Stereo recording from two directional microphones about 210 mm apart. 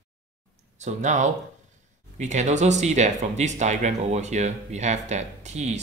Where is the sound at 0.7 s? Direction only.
35° right (ahead or behind).